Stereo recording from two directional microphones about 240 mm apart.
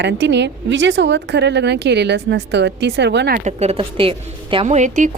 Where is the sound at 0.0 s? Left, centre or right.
Right.